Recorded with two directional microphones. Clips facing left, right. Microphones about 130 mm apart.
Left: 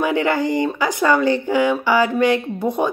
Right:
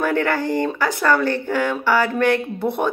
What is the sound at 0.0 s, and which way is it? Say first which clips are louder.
A woman's voice: left 2 dB; 15° left (ahead or behind).